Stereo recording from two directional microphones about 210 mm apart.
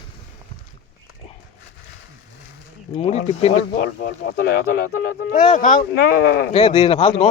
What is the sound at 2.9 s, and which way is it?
Speech, 30° left (ahead or behind).